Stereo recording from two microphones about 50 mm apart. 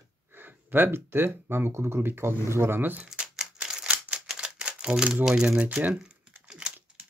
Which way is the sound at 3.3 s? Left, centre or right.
Centre.